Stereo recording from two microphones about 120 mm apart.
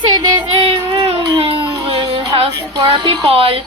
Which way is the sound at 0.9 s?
55° right (ahead or behind).